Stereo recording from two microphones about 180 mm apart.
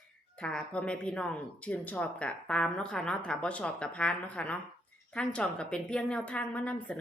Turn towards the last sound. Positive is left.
turn(degrees=5)  # may be behind; listen again after turning